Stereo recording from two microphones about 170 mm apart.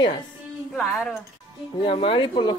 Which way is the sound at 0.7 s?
5° left (ahead or behind).